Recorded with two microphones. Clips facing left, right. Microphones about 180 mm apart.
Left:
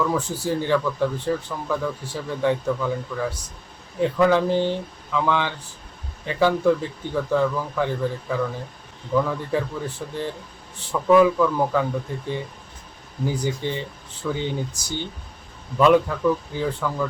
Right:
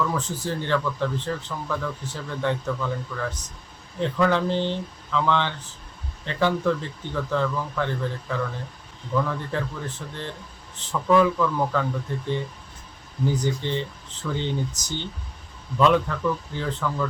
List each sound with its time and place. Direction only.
0.0 s speech: 10° left (ahead or behind)